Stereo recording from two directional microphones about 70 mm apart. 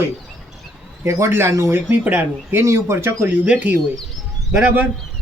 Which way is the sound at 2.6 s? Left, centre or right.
Right.